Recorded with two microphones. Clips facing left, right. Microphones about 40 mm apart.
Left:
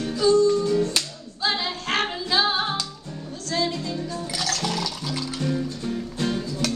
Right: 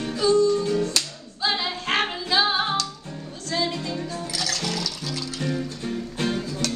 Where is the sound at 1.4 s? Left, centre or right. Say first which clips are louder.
Even; centre.